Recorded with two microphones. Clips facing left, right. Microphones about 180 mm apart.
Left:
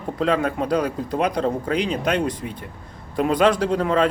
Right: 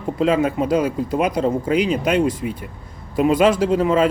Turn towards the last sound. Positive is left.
turn(degrees=-5)  # may be behind; listen again after turning